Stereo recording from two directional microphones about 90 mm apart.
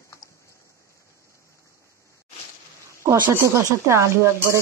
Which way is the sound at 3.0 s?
30° right (ahead or behind).